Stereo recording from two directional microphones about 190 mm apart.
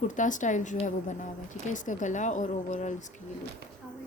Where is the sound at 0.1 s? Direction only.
40° left (ahead or behind).